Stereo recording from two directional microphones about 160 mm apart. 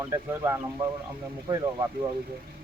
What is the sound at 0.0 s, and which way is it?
Speech, 20° right (ahead or behind).